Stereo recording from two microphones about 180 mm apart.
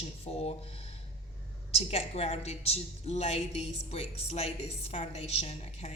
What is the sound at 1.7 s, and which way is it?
A woman's voice, 35° left (ahead or behind).